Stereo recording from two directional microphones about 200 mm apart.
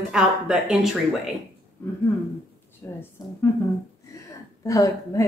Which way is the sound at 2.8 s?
10° left (ahead or behind).